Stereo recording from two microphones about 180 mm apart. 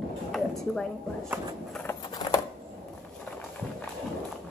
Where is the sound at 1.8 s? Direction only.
20° left (ahead or behind).